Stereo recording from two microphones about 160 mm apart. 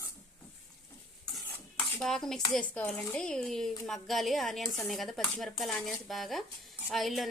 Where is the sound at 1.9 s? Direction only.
5° left (ahead or behind).